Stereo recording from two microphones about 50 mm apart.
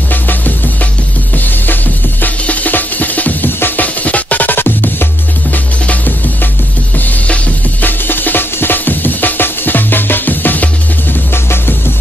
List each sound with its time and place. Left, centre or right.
2.2 s music: left
7.8 s music: left